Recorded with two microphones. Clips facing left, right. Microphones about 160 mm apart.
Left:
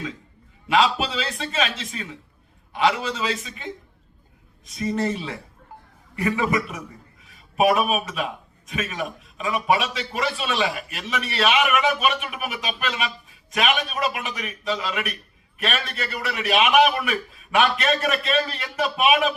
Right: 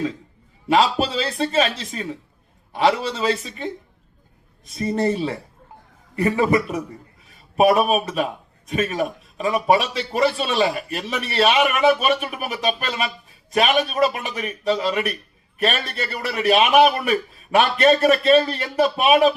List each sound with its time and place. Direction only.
0.7 s a man's voice: 35° right (ahead or behind)
4.8 s a man's voice: 35° right (ahead or behind)